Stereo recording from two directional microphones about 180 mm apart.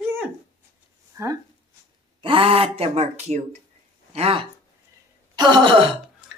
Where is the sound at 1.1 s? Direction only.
15° right (ahead or behind).